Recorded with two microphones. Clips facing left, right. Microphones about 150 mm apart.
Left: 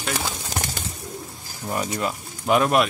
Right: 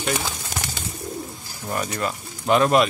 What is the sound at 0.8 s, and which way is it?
Bird, 55° left (ahead or behind).